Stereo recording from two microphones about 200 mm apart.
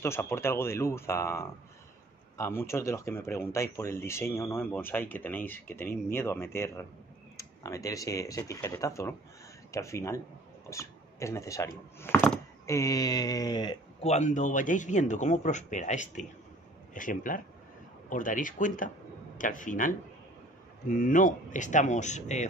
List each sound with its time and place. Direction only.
0.0 s speech: 10° left (ahead or behind)
14.0 s speech: 35° left (ahead or behind)